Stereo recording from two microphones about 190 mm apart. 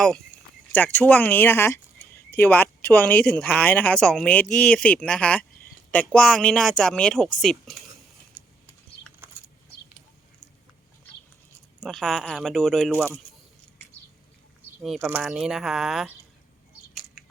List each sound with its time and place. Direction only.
0.7 s speech: 10° left (ahead or behind)
9.2 s a sound: 10° right (ahead or behind)
11.8 s speech: centre (ahead or behind)
14.8 s speech: centre (ahead or behind)